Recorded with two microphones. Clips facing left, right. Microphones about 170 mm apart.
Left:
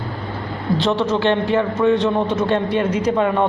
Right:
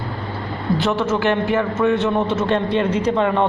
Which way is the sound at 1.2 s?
30° left (ahead or behind).